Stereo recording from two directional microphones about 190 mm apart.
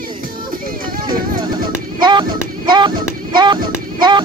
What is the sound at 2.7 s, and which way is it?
Music, 25° right (ahead or behind).